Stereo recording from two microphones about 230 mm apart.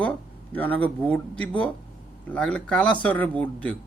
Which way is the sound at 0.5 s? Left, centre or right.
Centre.